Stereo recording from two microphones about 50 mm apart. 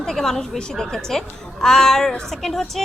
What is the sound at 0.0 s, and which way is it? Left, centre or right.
A woman's voice, centre.